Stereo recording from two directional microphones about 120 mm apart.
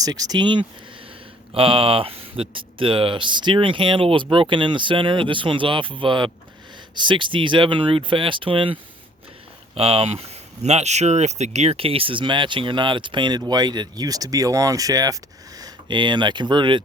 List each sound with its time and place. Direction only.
0.0 s speech: 30° right (ahead or behind)
1.5 s speech: 50° right (ahead or behind)